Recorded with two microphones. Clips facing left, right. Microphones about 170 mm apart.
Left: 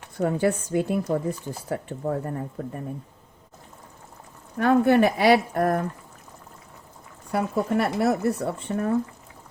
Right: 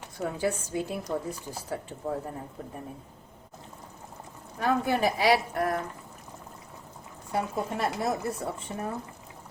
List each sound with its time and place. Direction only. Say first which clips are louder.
0.2 s speech: left 7 dB; 60° left (ahead or behind)
4.5 s speech: left 8 dB; 65° left (ahead or behind); by 5.8 s 50° left (ahead or behind)
7.3 s speech: left 6 dB; 70° left (ahead or behind)